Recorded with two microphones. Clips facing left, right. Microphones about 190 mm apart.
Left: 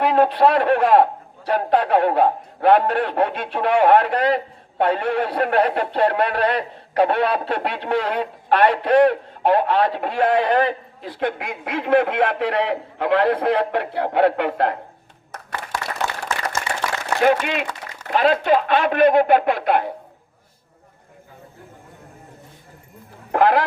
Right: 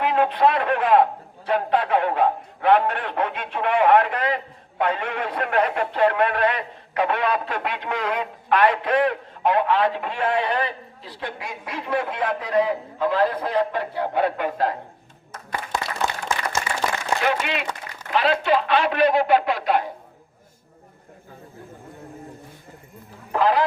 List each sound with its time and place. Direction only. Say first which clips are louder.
0.0 s a man's voice: left 3 dB; 40° left (ahead or behind); by 14.8 s 65° left (ahead or behind)
16.0 s a sound: right 1 dB; 15° right (ahead or behind)
17.2 s speech: left 9 dB; 45° left (ahead or behind)
23.3 s speech: left 3 dB; 60° left (ahead or behind)